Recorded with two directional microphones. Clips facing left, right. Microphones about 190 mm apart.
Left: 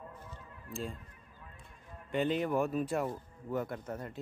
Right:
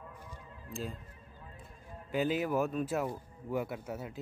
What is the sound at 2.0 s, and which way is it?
Speech, 5° right (ahead or behind).